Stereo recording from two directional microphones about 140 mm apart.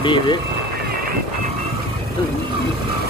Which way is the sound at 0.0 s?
35° left (ahead or behind).